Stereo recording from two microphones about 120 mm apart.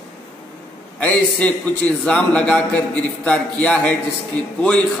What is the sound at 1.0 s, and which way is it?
A man's voice, 10° left (ahead or behind).